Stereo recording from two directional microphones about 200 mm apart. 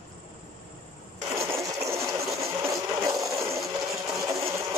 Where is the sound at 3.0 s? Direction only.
15° right (ahead or behind).